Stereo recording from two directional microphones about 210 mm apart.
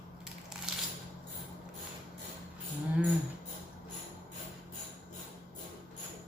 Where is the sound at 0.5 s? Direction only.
Centre (ahead or behind).